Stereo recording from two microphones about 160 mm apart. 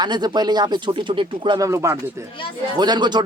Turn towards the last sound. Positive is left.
turn(degrees=-25)  # may be behind; listen again after turning